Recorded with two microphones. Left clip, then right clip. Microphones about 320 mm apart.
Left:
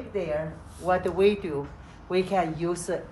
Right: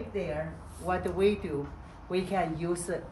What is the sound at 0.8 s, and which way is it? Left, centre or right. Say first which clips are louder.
A woman's voice: left 5 dB; centre.